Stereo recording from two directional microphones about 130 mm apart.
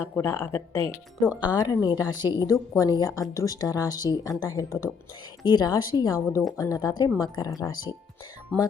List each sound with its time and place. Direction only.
0.0 s a woman's voice: 20° left (ahead or behind)